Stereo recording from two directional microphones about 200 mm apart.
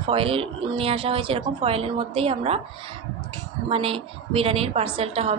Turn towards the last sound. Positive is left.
turn(degrees=-30)  # may be behind; listen again after turning